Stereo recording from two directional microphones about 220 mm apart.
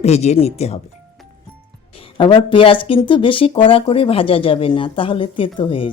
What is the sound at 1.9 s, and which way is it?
Speech, 25° left (ahead or behind).